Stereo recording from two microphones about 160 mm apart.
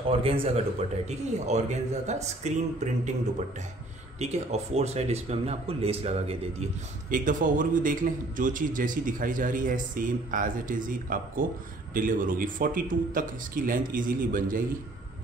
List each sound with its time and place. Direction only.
0.2 s a man's voice: 40° right (ahead or behind)
4.2 s speech: 45° right (ahead or behind)
7.1 s a man's voice: 55° right (ahead or behind)